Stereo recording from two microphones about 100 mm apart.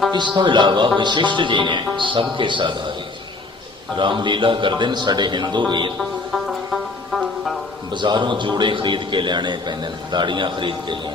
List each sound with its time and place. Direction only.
0.3 s a man's voice: 50° right (ahead or behind)
3.9 s a man's voice: 50° right (ahead or behind)
6.0 s music: centre (ahead or behind)
7.9 s a man's voice: 50° right (ahead or behind)